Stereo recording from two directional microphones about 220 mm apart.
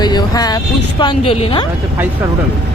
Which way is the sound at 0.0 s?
20° left (ahead or behind).